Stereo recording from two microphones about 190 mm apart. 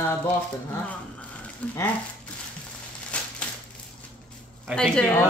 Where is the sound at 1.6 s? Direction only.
5° left (ahead or behind).